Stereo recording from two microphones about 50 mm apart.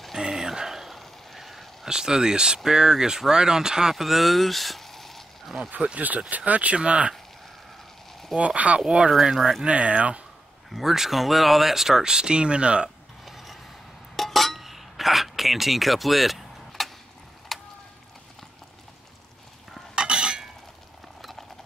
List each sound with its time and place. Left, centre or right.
0.2 s a sound: centre
1.9 s speech: centre
3.9 s speech: centre
5.7 s speech: right
8.4 s speech: right
9.2 s speech: centre
9.7 s speech: right
10.7 s speech: centre; by 12.9 s right
13.2 s a sound: centre
14.1 s cutlery: centre
17.5 s a sound: centre
20.0 s stir: centre
21.2 s clip-clop: centre